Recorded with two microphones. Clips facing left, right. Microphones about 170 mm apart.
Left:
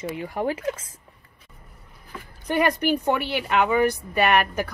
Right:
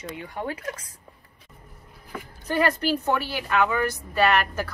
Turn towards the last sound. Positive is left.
turn(degrees=20)  # may be behind; listen again after turning